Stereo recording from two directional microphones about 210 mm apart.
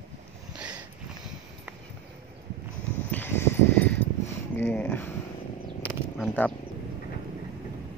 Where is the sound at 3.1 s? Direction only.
10° left (ahead or behind).